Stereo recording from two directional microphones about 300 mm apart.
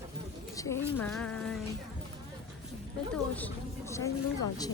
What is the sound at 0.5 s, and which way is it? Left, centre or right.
Speech, centre.